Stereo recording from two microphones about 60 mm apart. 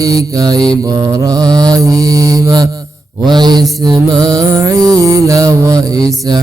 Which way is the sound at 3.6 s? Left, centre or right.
Right.